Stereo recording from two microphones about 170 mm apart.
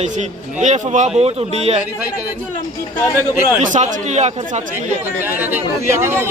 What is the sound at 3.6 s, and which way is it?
Speech, 45° right (ahead or behind).